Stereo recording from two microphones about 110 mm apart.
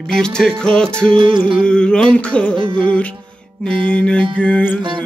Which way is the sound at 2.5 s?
50° right (ahead or behind).